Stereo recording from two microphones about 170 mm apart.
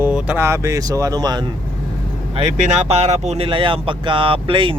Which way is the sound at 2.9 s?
40° right (ahead or behind).